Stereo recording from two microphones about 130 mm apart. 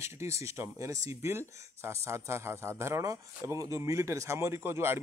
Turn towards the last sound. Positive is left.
turn(degrees=-20)  # may be behind; listen again after turning